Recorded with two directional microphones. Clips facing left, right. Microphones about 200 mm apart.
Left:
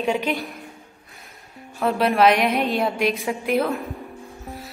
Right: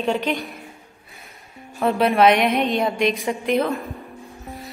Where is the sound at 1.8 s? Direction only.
Centre (ahead or behind).